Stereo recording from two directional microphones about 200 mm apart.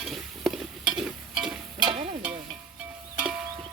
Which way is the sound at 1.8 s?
25° right (ahead or behind).